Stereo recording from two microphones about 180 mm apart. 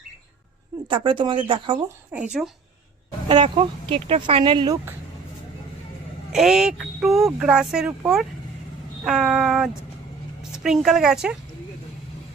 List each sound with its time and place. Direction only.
0.9 s speech: 25° right (ahead or behind)
2.1 s speech: 5° right (ahead or behind)
3.2 s speech: 30° right (ahead or behind)
6.3 s speech: centre (ahead or behind)